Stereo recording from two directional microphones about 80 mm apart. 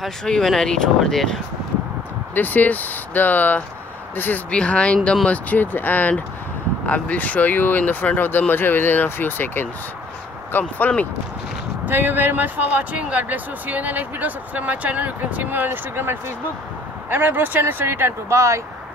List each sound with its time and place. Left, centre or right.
0.0 s speech: centre
2.3 s speech: left
11.8 s speech: right